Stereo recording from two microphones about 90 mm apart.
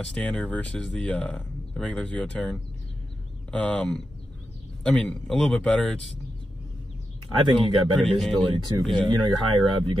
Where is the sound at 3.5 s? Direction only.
15° left (ahead or behind).